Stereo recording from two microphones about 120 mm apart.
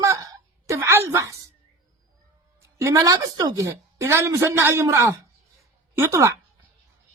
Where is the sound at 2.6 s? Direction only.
25° right (ahead or behind).